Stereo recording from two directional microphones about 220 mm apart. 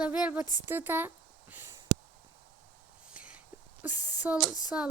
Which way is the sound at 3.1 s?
5° right (ahead or behind).